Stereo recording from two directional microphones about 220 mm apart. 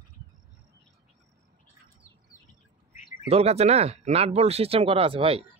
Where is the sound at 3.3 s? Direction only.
30° right (ahead or behind).